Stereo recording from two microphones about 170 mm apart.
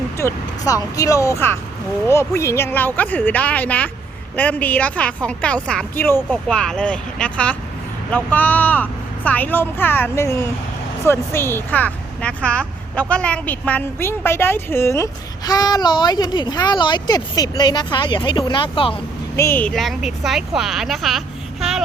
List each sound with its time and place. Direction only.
0.2 s speech: 20° left (ahead or behind)
19.4 s a woman's voice: 10° left (ahead or behind)